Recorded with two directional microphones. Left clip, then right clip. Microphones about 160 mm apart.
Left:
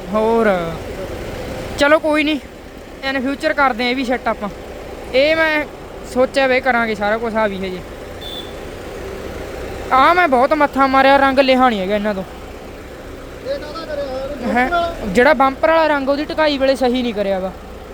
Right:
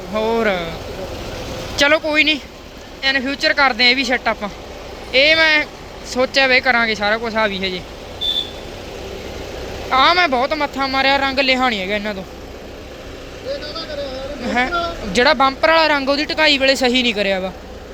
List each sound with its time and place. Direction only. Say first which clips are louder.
0.1 s speech: left 3 dB; 20° left (ahead or behind)
1.7 s speech: left 1 dB; 25° left (ahead or behind)
9.9 s speech: left 2 dB; 25° left (ahead or behind)
14.4 s a sound: left 2 dB; 25° left (ahead or behind)
15.1 s speech: left 1 dB; 30° left (ahead or behind); by 17.5 s 10° left (ahead or behind)